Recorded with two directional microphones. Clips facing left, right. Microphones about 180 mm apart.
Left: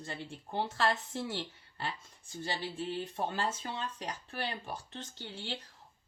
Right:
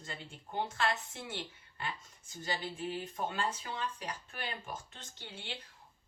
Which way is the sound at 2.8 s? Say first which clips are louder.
Left 2 dB; 15° right (ahead or behind).